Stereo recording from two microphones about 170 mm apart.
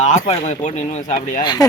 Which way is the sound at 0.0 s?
40° left (ahead or behind).